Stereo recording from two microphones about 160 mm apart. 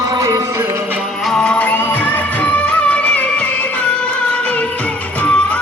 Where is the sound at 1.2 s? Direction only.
5° left (ahead or behind).